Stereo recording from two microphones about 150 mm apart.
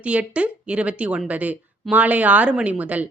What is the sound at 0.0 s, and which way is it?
A woman's voice, 10° right (ahead or behind).